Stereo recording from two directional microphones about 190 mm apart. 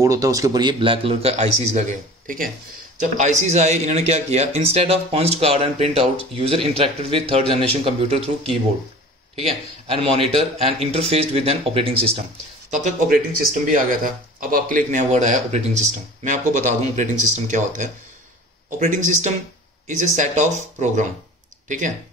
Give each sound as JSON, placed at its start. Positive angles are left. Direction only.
{"t": 0.0, "sound": "a man's voice", "side_deg": -15}
{"t": 9.8, "sound": "speech", "side_deg": -30}
{"t": 12.8, "sound": "speech", "side_deg": -50}